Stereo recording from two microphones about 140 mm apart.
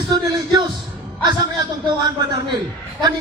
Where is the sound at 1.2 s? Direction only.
30° right (ahead or behind).